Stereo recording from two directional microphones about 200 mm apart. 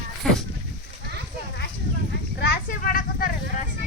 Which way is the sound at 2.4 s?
50° left (ahead or behind).